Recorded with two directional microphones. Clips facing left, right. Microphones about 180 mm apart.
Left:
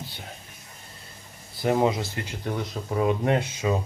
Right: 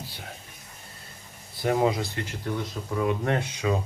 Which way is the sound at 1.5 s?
Centre (ahead or behind).